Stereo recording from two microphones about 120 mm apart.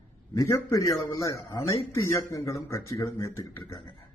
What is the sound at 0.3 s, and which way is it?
Speech, 25° left (ahead or behind).